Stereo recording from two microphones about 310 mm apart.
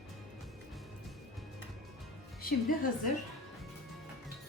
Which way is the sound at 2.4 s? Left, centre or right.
Left.